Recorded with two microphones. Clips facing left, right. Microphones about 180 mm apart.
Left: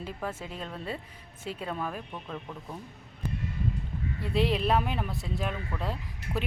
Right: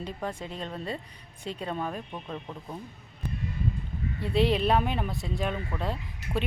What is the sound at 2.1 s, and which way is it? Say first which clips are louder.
Speech: right 1 dB; 15° right (ahead or behind).